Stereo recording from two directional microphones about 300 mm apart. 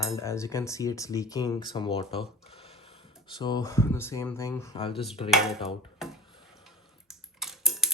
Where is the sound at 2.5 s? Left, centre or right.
Centre.